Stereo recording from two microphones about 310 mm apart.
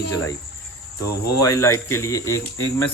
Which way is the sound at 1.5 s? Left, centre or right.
Centre.